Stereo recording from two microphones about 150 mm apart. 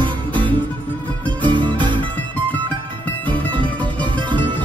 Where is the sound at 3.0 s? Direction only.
10° left (ahead or behind).